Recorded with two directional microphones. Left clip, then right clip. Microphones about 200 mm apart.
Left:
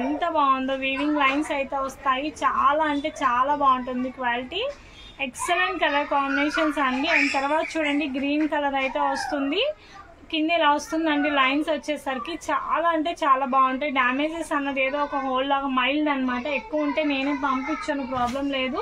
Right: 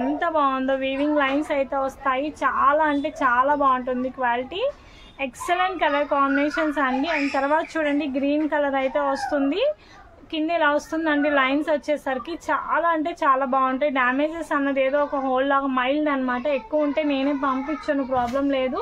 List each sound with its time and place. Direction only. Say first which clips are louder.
0.2 s a woman's voice: left 1 dB; 30° right (ahead or behind)